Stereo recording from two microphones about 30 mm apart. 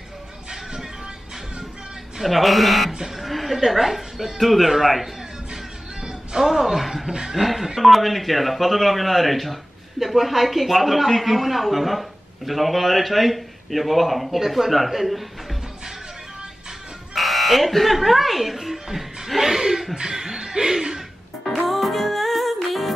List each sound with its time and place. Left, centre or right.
2.2 s a woman's voice: centre
5.5 s music: right
6.4 s speech: centre
7.1 s speech: right
7.3 s speech: centre
7.8 s speech: centre
17.1 s speech: centre
20.0 s speech: right
21.5 s music: centre